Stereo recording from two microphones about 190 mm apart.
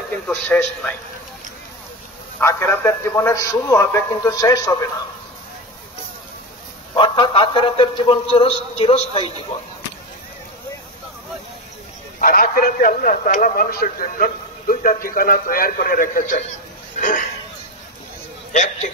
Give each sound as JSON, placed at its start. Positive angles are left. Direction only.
{"t": 0.3, "sound": "a man's voice", "side_deg": 10}
{"t": 2.4, "sound": "a man's voice", "side_deg": 15}
{"t": 6.9, "sound": "a man's voice", "side_deg": 25}
{"t": 12.2, "sound": "a man's voice", "side_deg": 50}
{"t": 18.5, "sound": "a man's voice", "side_deg": 40}